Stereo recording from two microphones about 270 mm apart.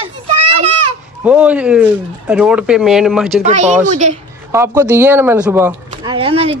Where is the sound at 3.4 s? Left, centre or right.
Right.